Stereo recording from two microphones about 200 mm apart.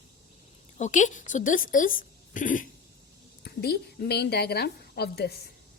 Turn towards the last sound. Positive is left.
turn(degrees=55)  # may be behind; listen again after turning